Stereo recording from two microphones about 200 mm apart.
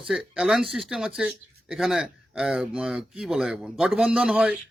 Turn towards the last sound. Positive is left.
turn(degrees=-5)  # may be behind; listen again after turning